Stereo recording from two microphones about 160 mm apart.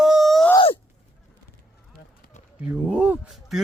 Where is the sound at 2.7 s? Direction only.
10° right (ahead or behind).